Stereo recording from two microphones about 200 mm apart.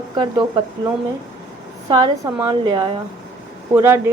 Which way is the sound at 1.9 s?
20° right (ahead or behind).